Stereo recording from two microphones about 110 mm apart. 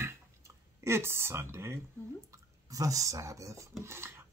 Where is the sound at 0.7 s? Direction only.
25° right (ahead or behind).